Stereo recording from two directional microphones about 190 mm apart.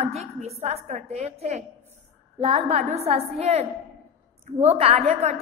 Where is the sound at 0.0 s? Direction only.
35° right (ahead or behind).